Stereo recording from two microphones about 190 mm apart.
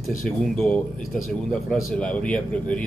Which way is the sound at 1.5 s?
5° left (ahead or behind).